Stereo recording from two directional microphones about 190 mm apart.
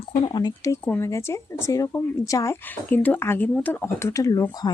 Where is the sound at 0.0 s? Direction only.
25° left (ahead or behind).